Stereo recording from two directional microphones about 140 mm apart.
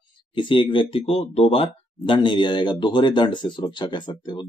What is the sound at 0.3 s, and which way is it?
Speech, 35° left (ahead or behind).